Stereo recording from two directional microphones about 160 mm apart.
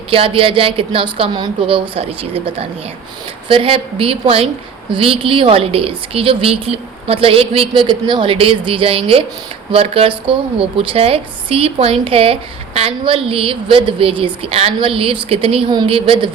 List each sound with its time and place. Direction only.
0.1 s a woman's voice: 35° right (ahead or behind)